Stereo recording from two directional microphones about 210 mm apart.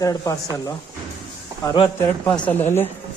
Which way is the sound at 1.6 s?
25° left (ahead or behind).